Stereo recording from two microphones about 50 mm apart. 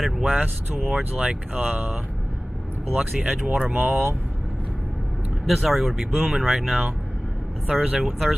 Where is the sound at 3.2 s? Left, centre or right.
Right.